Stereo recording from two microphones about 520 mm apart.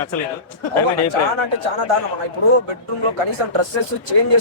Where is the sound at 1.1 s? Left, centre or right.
Right.